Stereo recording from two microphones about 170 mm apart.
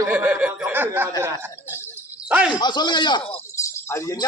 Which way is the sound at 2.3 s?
5° right (ahead or behind).